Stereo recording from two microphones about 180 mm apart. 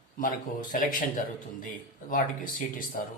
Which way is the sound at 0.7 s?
50° left (ahead or behind).